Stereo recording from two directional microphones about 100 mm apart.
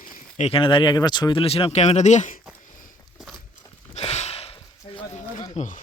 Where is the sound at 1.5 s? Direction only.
80° left.